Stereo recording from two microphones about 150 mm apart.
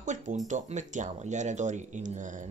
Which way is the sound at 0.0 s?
55° right (ahead or behind).